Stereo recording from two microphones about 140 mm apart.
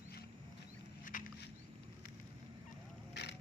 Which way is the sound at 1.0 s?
70° left (ahead or behind).